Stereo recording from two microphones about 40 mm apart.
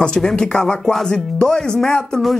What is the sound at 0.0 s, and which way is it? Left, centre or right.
Speech, left.